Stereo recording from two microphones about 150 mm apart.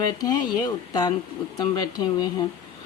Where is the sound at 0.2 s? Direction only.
25° left (ahead or behind).